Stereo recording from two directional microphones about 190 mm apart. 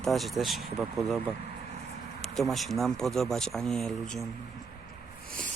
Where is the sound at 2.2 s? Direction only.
Centre (ahead or behind).